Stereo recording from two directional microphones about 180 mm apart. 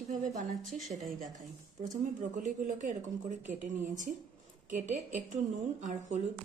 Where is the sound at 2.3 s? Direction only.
45° right (ahead or behind).